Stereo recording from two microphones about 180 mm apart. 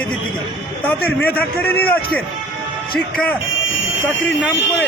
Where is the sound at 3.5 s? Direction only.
90° left.